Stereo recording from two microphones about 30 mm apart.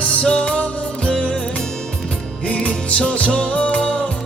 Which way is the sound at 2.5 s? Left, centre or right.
Left.